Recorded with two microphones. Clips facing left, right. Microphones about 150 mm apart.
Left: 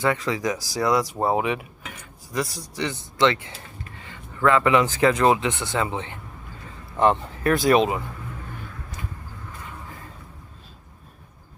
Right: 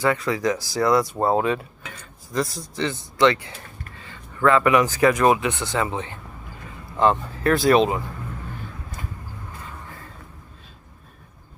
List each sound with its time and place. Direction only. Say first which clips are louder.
0.0 s speech: right 2 dB; 20° left (ahead or behind)